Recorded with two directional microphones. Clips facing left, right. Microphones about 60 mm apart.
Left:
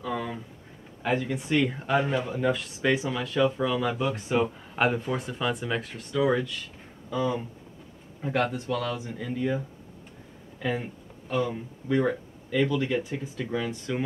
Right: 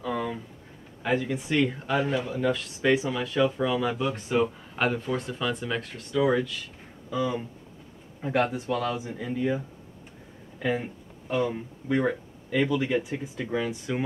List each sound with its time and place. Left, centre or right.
0.0 s a sound: centre
1.0 s speech: centre
2.6 s speech: centre
10.6 s speech: centre